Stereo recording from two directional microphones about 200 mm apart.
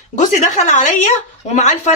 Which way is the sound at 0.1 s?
40° left (ahead or behind).